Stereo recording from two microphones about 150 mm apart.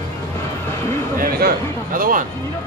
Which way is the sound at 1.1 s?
75° right (ahead or behind).